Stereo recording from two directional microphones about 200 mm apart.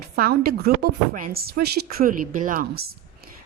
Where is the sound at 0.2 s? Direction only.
50° right (ahead or behind).